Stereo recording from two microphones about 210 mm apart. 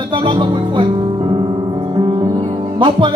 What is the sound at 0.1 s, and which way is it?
Speech, 25° right (ahead or behind).